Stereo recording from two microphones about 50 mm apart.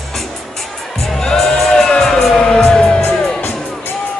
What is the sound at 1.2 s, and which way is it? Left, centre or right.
Music, centre.